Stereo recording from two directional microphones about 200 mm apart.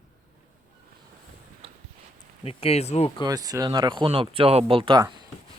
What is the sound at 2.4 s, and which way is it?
Speech, 30° left (ahead or behind).